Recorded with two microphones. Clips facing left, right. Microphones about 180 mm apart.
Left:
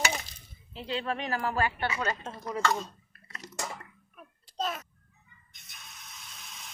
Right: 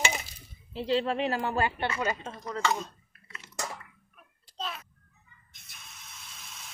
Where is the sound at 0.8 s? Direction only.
30° right (ahead or behind).